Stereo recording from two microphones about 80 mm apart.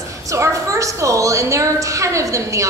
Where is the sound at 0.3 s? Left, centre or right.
Right.